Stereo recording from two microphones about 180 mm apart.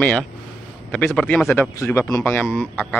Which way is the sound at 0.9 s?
5° left (ahead or behind).